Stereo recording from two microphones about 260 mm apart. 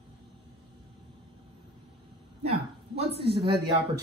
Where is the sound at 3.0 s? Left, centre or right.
Right.